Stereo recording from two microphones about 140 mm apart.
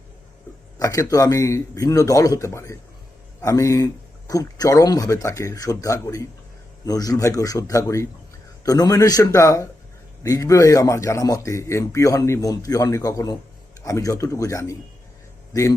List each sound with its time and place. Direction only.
0.8 s speech: 25° left (ahead or behind)